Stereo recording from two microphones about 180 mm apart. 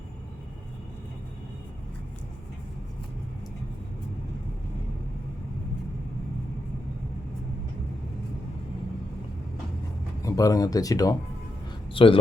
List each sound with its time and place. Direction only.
10.2 s speech: 20° left (ahead or behind)